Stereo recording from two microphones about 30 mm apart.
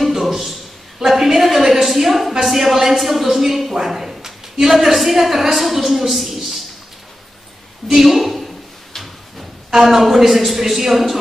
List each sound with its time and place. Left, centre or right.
0.0 s a sound: centre
1.9 s a woman's voice: centre
7.9 s a man's voice: centre
8.9 s drawer open or close: centre
9.7 s a woman's voice: centre